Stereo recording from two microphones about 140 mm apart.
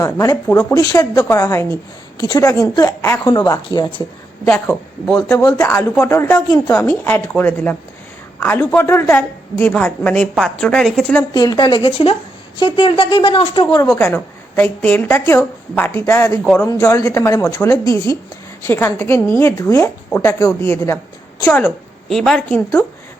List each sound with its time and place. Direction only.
0.0 s a woman's voice: 20° left (ahead or behind)
4.4 s a woman's voice: 15° left (ahead or behind)
11.3 s speech: 30° left (ahead or behind)
13.9 s a woman's voice: 15° left (ahead or behind)
22.1 s a woman's voice: 5° left (ahead or behind)